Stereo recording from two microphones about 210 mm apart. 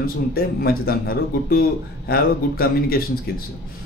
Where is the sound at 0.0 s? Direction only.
45° left (ahead or behind).